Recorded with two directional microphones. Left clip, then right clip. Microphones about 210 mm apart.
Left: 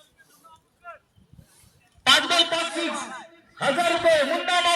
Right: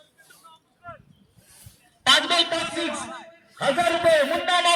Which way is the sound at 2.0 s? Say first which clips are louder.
Even; 15° right (ahead or behind).